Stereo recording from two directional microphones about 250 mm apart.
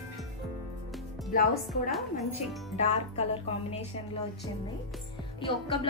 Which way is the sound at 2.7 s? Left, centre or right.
Left.